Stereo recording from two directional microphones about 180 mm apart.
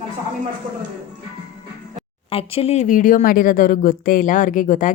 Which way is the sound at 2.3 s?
30° left (ahead or behind).